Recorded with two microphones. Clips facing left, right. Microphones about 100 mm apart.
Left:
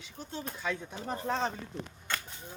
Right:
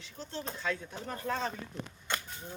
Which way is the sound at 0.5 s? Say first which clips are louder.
Even; 15° left (ahead or behind).